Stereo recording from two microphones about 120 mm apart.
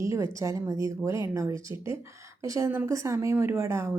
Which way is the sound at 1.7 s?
45° left (ahead or behind).